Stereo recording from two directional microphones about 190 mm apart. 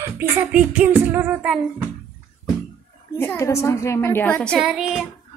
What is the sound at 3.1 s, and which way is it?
Speech, 15° left (ahead or behind).